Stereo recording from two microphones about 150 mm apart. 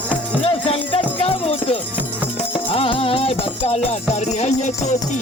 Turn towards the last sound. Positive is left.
turn(degrees=50)  # may be behind; listen again after turning